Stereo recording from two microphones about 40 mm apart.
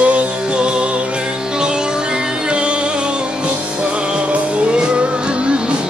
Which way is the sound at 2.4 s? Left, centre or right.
Right.